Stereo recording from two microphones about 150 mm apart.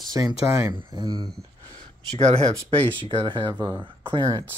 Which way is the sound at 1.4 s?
25° right (ahead or behind).